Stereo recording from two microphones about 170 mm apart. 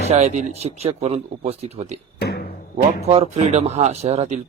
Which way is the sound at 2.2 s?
70° left (ahead or behind).